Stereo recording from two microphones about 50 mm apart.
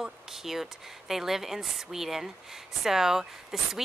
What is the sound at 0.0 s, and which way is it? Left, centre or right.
A woman's voice, centre.